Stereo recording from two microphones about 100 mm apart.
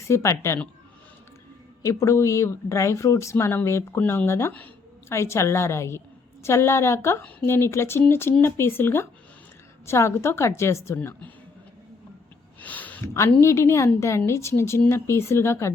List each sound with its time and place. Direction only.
0.1 s speech: 30° left (ahead or behind)
1.8 s speech: 30° left (ahead or behind)
12.5 s a sound: 15° left (ahead or behind)
13.4 s speech: 25° left (ahead or behind)